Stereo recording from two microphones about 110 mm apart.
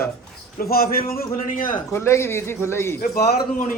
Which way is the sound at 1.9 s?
25° left (ahead or behind).